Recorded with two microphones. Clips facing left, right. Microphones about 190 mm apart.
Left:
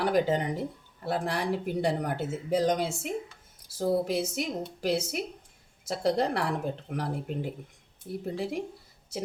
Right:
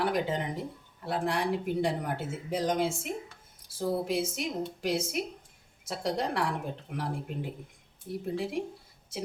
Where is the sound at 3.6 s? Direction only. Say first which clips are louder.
Left 3 dB; 40° left (ahead or behind).